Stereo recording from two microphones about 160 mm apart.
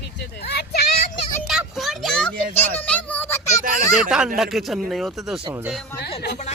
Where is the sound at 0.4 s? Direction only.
90° left.